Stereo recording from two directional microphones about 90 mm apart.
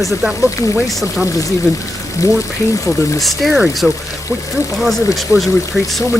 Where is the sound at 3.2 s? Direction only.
Centre (ahead or behind).